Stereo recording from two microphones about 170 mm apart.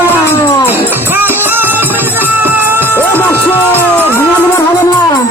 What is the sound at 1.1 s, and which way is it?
Music, 10° right (ahead or behind).